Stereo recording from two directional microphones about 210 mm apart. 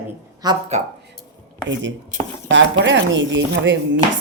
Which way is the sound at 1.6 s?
60° right (ahead or behind).